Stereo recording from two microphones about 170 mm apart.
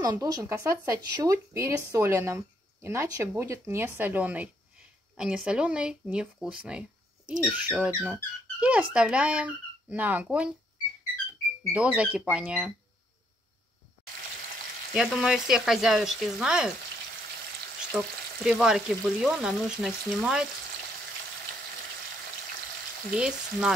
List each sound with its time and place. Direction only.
0.0 s speech: 25° right (ahead or behind); by 10.5 s 5° right (ahead or behind)
11.7 s speech: 5° right (ahead or behind)
15.0 s frying: centre (ahead or behind)
17.9 s frying: 5° right (ahead or behind)
23.1 s frying: 5° right (ahead or behind)